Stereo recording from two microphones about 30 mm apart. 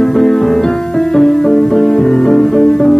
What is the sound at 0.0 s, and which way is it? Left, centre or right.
Music, centre.